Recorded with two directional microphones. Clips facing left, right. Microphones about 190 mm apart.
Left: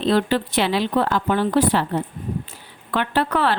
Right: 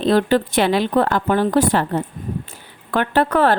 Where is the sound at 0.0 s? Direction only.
45° right (ahead or behind).